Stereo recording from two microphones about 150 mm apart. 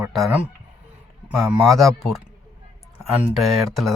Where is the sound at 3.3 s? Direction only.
Centre (ahead or behind).